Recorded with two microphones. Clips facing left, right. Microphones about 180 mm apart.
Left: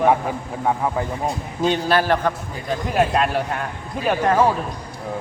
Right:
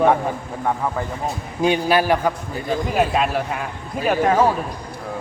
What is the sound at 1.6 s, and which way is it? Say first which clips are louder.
Speech: right 1 dB; 10° right (ahead or behind).